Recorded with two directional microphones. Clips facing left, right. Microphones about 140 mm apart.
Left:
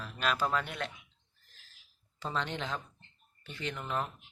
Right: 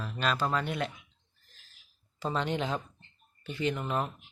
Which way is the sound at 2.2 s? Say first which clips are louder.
Right 5 dB; 10° right (ahead or behind).